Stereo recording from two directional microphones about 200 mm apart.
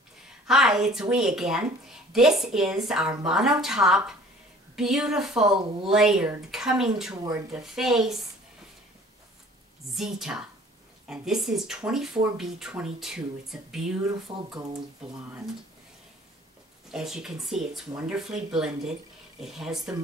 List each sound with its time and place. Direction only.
0.5 s speech: centre (ahead or behind)
9.9 s speech: centre (ahead or behind)
14.3 s speech: 20° right (ahead or behind)
16.9 s speech: 5° right (ahead or behind)